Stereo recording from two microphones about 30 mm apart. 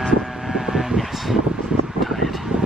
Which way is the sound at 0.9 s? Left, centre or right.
Centre.